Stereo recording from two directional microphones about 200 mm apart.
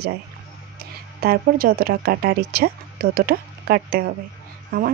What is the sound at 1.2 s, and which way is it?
Speech, 50° right (ahead or behind).